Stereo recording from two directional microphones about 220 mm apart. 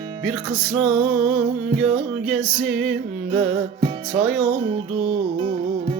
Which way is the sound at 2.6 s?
45° right (ahead or behind).